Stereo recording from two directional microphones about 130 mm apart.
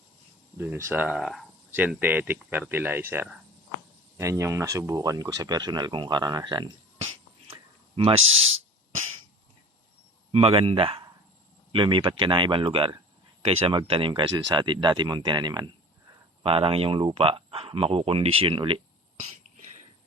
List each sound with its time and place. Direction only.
0.5 s speech: 15° right (ahead or behind)
1.0 s speech: 5° right (ahead or behind)
1.7 s speech: 10° right (ahead or behind); by 6.7 s 35° right (ahead or behind)
7.9 s speech: 45° right (ahead or behind)
10.3 s speech: 45° right (ahead or behind)
16.4 s speech: 45° right (ahead or behind)